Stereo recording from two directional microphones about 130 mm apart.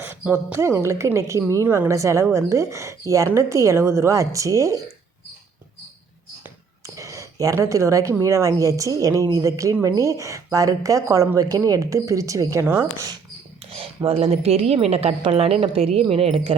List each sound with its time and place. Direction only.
0.0 s speech: 15° right (ahead or behind)
6.8 s a sound: 25° right (ahead or behind)
8.2 s speech: 25° right (ahead or behind)
13.7 s a woman's voice: 45° right (ahead or behind)